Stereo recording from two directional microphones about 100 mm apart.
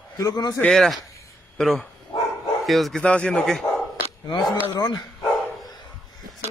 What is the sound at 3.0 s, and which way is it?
Speech, 10° left (ahead or behind).